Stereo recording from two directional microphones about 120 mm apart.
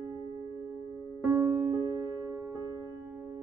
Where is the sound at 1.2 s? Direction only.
15° right (ahead or behind).